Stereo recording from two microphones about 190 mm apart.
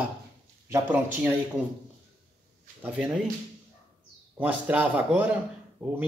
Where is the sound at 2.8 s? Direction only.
5° right (ahead or behind).